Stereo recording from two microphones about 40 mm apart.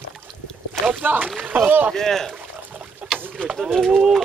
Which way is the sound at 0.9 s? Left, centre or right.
Right.